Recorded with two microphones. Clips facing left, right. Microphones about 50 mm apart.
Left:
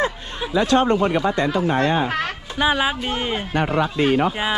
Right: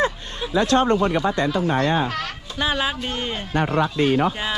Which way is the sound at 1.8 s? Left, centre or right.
Left.